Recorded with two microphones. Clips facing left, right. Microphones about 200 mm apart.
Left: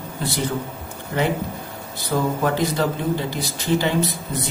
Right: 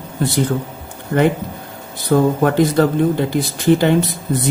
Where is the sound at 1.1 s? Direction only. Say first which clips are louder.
Right 7 dB; 45° right (ahead or behind).